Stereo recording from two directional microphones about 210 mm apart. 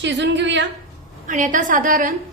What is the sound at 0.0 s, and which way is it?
Speech, 55° right (ahead or behind).